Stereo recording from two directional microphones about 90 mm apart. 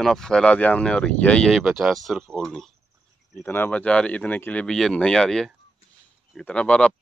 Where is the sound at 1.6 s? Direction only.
5° right (ahead or behind).